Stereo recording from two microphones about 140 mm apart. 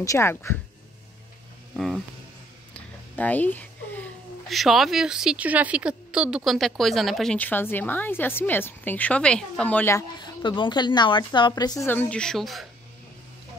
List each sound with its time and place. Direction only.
0.0 s speech: 20° left (ahead or behind)
2.7 s a sound: 10° left (ahead or behind)
4.5 s a woman's voice: centre (ahead or behind)
7.3 s speech: 15° left (ahead or behind)
10.1 s a woman's voice: 35° left (ahead or behind)
11.9 s a woman's voice: 10° left (ahead or behind)